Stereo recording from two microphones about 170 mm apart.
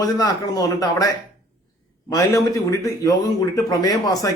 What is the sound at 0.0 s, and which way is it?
Speech, 20° left (ahead or behind).